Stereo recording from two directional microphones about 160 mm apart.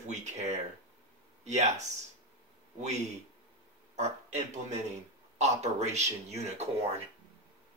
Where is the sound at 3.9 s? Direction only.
45° right (ahead or behind).